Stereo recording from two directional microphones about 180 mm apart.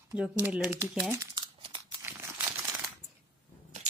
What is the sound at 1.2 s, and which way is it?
Crumpling, 25° right (ahead or behind).